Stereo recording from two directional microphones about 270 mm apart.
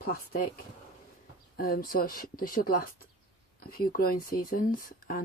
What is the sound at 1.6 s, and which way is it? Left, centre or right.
Speech, left.